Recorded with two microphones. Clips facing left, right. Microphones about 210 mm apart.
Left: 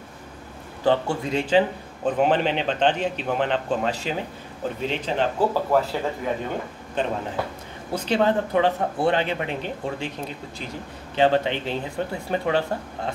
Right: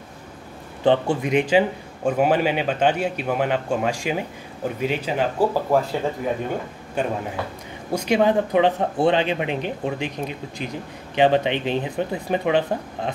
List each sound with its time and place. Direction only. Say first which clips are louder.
0.8 s a man's voice: right 3 dB; 15° right (ahead or behind)
7.0 s a man's voice: right 1 dB; 10° right (ahead or behind)